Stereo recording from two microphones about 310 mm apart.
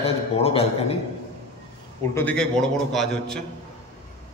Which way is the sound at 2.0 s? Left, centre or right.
Centre.